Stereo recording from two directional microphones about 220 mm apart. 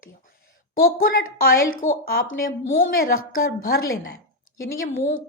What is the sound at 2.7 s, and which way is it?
Speech, 40° left (ahead or behind).